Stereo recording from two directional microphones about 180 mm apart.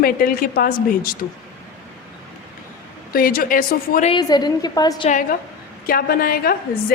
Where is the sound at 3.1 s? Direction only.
55° left (ahead or behind).